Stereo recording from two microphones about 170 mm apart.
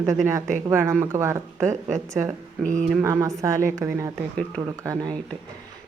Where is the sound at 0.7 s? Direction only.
15° right (ahead or behind).